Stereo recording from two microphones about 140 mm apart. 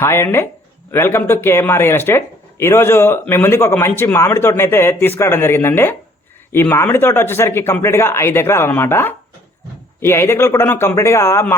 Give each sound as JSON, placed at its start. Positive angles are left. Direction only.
{"t": 0.0, "sound": "speech", "side_deg": 20}